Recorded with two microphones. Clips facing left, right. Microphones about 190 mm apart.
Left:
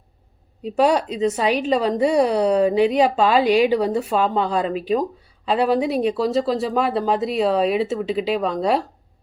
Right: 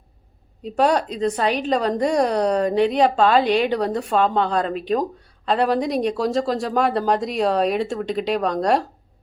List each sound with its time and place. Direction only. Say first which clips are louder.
0.8 s a woman's voice: left 1 dB; 10° left (ahead or behind)